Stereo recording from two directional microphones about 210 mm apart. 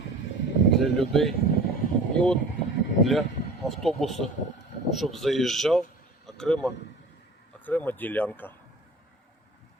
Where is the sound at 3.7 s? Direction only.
Centre (ahead or behind).